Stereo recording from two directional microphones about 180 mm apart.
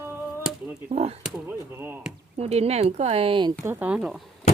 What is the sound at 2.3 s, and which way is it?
Speech, 35° right (ahead or behind).